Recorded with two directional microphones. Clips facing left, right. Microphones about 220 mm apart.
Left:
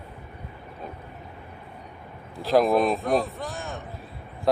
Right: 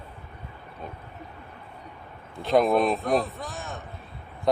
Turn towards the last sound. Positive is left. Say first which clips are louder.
# left 2 dB
turn(degrees=0)  # may be behind; listen again after turning